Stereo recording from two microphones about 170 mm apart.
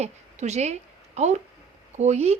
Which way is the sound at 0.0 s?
40° right (ahead or behind).